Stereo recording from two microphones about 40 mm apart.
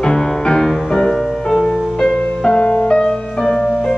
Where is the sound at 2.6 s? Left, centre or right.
Left.